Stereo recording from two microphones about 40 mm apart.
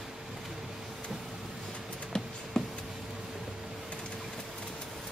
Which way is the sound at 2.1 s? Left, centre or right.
Centre.